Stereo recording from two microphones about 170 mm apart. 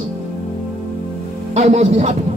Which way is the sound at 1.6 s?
40° right (ahead or behind).